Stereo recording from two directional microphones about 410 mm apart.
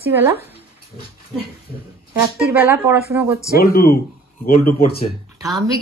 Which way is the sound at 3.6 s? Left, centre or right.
Left.